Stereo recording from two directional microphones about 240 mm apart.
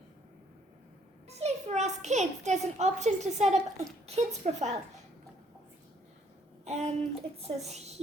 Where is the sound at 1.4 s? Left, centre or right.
Right.